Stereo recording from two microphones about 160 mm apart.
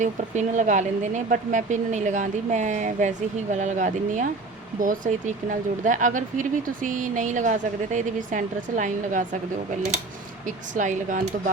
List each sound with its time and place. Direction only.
0.0 s speech: 50° right (ahead or behind)
10.4 s speech: 55° right (ahead or behind)